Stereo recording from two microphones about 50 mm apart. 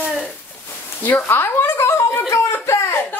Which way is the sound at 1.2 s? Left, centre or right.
Left.